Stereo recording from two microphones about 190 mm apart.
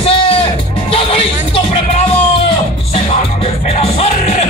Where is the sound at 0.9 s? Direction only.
30° left (ahead or behind).